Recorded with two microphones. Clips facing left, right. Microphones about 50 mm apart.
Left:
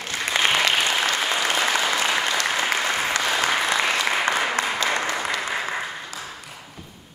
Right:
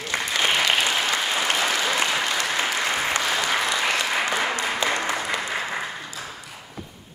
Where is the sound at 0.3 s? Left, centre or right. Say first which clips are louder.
Left 2 dB; left.